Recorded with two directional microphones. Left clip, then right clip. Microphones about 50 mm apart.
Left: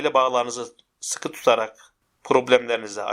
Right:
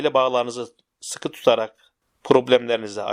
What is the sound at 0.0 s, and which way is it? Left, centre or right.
Speech, right.